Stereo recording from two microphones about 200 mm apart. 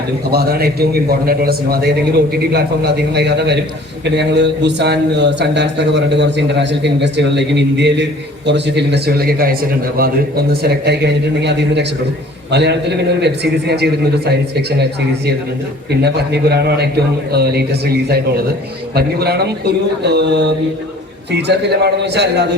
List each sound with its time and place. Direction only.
0.3 s a man's voice: 50° right (ahead or behind)
15.9 s a man's voice: 55° right (ahead or behind)